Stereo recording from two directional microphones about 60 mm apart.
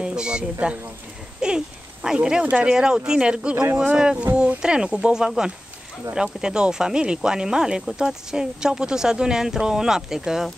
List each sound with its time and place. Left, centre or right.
0.0 s speech: centre